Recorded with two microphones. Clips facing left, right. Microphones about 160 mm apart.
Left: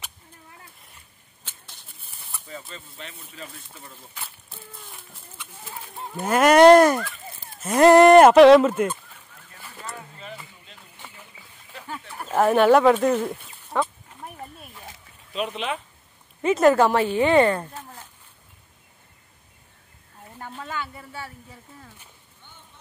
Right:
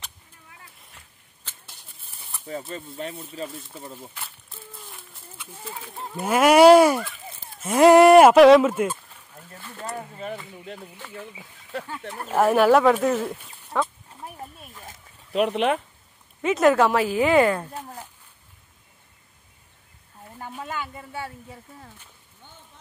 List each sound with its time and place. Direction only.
1.4 s a sound: centre (ahead or behind)
2.7 s speech: 50° right (ahead or behind)
3.1 s speech: 25° right (ahead or behind)
3.4 s speech: centre (ahead or behind)
3.8 s speech: 35° right (ahead or behind)
4.1 s speech: centre (ahead or behind)
10.1 s a sound: 55° right (ahead or behind)
12.3 s a sound: 5° right (ahead or behind)
15.3 s speech: 65° right (ahead or behind)
16.4 s speech: centre (ahead or behind)
20.3 s speech: 10° right (ahead or behind)